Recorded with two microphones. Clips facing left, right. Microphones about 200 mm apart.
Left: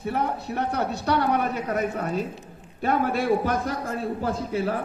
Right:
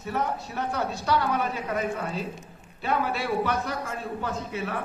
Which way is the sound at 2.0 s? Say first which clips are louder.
Left 4 dB; 50° left (ahead or behind).